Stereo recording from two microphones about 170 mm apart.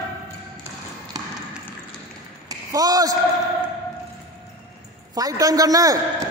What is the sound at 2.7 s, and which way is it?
Speech, 20° right (ahead or behind).